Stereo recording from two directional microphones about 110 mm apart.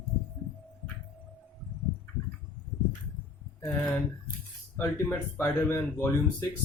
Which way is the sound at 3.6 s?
15° left (ahead or behind).